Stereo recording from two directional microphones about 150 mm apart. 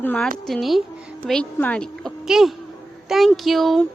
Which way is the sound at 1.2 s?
10° left (ahead or behind).